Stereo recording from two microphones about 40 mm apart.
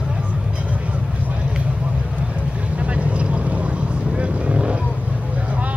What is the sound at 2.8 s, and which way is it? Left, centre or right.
Vehicle, right.